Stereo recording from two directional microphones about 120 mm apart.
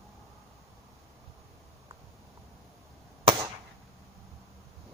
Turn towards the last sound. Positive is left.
turn(degrees=-40)  # may be behind; listen again after turning